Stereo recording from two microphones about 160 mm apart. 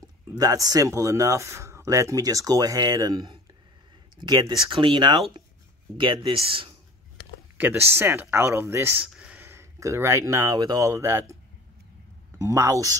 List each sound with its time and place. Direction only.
0.3 s speech: 20° right (ahead or behind)
7.5 s speech: 10° right (ahead or behind)
12.4 s speech: 20° right (ahead or behind)